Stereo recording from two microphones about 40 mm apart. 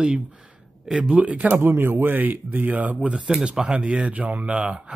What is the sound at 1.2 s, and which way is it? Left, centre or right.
Speech, right.